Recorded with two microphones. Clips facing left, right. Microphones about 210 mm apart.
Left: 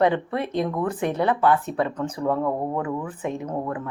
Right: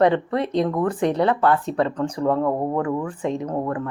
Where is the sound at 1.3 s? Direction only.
5° left (ahead or behind).